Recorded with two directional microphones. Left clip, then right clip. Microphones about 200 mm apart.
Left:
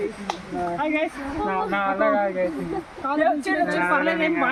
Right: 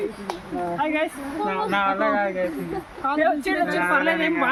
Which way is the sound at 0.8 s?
Centre (ahead or behind).